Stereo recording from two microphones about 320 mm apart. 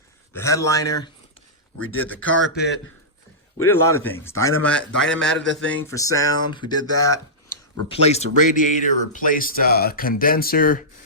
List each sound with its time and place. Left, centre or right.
0.3 s speech: centre
1.8 s speech: left
2.0 s a man's voice: centre
3.6 s a man's voice: centre; by 10.8 s left